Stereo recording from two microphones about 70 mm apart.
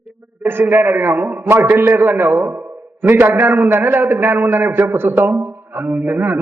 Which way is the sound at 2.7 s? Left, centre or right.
Right.